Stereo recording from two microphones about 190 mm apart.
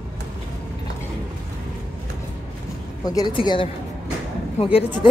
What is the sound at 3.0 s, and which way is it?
A woman's voice, 20° left (ahead or behind).